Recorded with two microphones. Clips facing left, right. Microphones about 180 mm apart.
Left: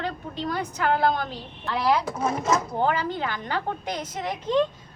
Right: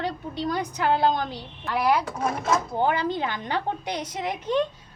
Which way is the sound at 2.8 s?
15° right (ahead or behind).